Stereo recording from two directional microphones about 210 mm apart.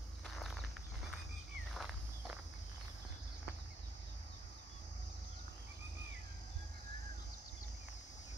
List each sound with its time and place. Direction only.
0.4 s walk: centre (ahead or behind)
1.7 s walk: centre (ahead or behind)